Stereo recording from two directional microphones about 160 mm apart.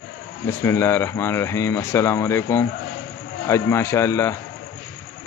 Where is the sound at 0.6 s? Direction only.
15° left (ahead or behind).